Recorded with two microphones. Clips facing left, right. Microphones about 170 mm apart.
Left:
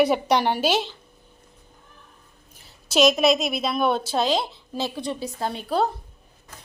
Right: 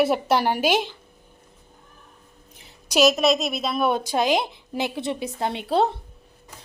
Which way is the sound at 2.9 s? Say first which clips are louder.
Even; 5° right (ahead or behind).